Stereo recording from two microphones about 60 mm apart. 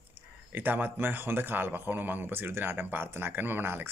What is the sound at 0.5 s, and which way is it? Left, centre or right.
Speech, right.